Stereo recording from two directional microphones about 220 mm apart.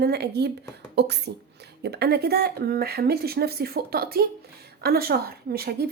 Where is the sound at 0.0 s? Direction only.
45° right (ahead or behind).